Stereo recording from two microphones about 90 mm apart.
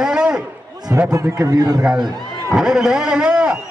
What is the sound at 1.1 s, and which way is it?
Speech, 35° right (ahead or behind).